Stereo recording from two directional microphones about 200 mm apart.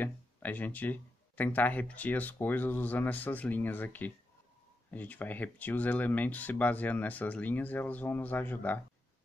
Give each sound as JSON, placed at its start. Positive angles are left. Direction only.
{"t": 0.0, "sound": "speech", "side_deg": 10}